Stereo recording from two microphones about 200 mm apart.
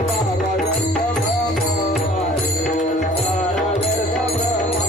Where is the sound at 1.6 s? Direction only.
55° left (ahead or behind).